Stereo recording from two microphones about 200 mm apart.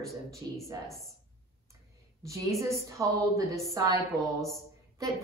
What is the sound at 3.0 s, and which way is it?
A woman's voice, 15° right (ahead or behind).